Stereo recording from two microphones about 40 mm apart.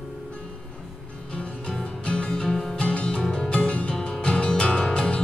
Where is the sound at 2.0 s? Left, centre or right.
Left.